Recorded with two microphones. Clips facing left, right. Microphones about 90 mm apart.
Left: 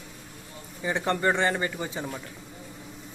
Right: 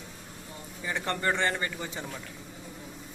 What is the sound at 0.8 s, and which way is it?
Speech, 20° left (ahead or behind).